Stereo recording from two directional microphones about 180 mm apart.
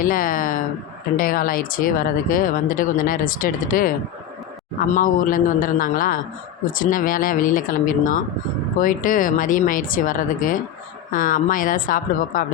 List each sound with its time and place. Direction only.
0.0 s speech: 50° left (ahead or behind)